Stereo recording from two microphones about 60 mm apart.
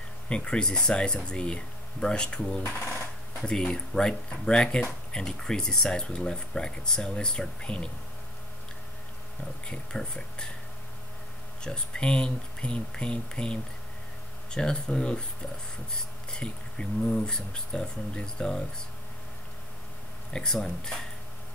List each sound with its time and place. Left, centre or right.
0.3 s speech: centre
9.7 s speech: centre
11.6 s speech: centre
20.3 s speech: centre